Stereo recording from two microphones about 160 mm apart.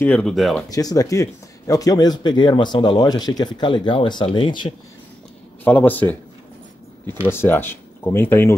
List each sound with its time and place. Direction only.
0.0 s speech: 10° left (ahead or behind)
0.7 s speech: 25° left (ahead or behind)
5.6 s speech: 10° left (ahead or behind)